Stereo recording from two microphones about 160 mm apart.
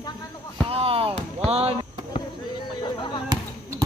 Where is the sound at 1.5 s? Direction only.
40° right (ahead or behind).